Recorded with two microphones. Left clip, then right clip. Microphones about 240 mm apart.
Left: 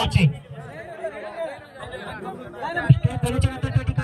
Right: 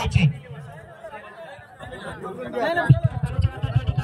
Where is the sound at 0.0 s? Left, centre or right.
Left.